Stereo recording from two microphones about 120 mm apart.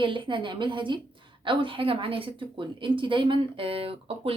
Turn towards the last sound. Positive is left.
turn(degrees=-50)  # may be behind; listen again after turning